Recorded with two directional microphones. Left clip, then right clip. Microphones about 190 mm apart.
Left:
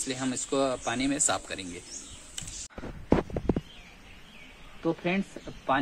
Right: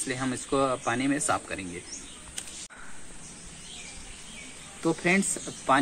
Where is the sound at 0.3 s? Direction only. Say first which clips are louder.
Right 1 dB; 45° left (ahead or behind).